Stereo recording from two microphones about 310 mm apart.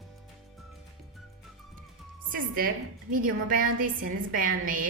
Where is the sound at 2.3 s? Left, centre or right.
Right.